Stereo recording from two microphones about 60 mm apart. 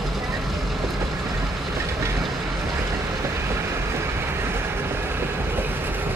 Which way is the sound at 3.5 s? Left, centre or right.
Right.